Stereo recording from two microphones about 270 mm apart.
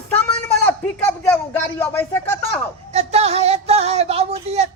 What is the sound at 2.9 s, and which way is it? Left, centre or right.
Speech, right.